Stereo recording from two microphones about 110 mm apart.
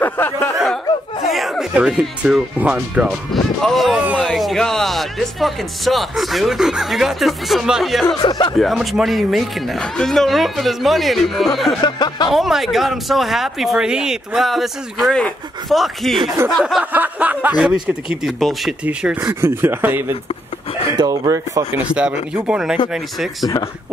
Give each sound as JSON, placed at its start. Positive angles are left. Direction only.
{"t": 0.0, "sound": "a sound", "side_deg": 20}
{"t": 1.3, "sound": "a sound", "side_deg": 0}
{"t": 1.7, "sound": "speech", "side_deg": -10}
{"t": 3.6, "sound": "speech", "side_deg": 0}
{"t": 8.3, "sound": "speech", "side_deg": 45}
{"t": 8.5, "sound": "speech", "side_deg": 0}
{"t": 11.8, "sound": "speech", "side_deg": 40}
{"t": 12.3, "sound": "speech", "side_deg": 0}
{"t": 16.8, "sound": "speech", "side_deg": -15}
{"t": 18.1, "sound": "speech", "side_deg": 0}
{"t": 19.4, "sound": "speech", "side_deg": -20}
{"t": 20.9, "sound": "speech", "side_deg": -40}
{"t": 21.9, "sound": "speech", "side_deg": -10}
{"t": 23.4, "sound": "speech", "side_deg": 35}